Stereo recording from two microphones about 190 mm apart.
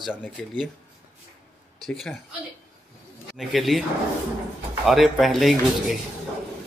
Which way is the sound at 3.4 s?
Centre (ahead or behind).